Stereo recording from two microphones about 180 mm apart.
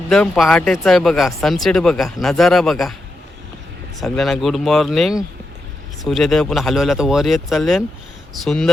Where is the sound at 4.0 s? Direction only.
5° left (ahead or behind).